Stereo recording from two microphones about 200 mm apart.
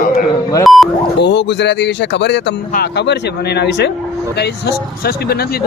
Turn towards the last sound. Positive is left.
turn(degrees=60)  # may be behind; listen again after turning